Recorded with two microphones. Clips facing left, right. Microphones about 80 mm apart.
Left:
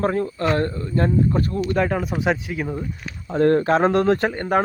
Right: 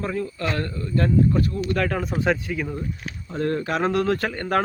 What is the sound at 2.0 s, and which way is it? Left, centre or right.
Speech, centre.